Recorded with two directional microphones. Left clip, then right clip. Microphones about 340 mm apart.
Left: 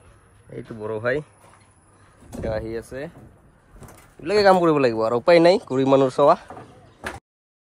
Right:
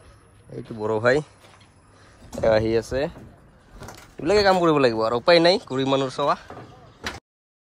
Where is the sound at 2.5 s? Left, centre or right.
Right.